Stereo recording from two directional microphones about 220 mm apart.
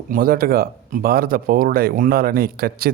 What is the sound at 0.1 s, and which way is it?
Speech, 40° right (ahead or behind).